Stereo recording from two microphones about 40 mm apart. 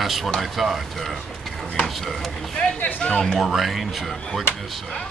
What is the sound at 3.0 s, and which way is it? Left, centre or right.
Speech, centre.